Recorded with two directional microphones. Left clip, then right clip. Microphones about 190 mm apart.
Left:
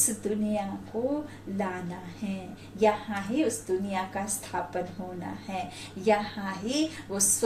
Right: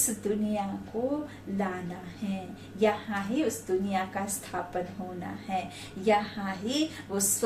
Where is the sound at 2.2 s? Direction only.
15° right (ahead or behind).